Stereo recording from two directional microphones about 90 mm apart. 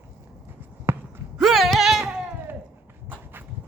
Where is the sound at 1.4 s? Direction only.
Centre (ahead or behind).